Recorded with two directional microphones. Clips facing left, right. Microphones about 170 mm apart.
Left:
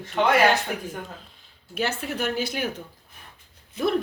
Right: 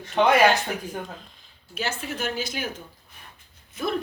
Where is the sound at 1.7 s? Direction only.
60° left (ahead or behind).